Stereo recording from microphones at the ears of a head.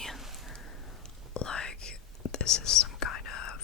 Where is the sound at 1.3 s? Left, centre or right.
Left.